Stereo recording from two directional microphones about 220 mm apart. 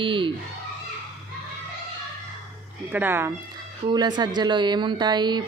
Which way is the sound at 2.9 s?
10° right (ahead or behind).